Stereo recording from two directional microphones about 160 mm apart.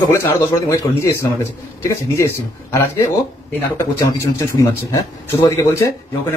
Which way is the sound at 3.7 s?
15° left (ahead or behind).